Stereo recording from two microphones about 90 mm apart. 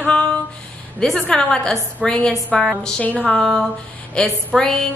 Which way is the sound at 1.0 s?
5° left (ahead or behind).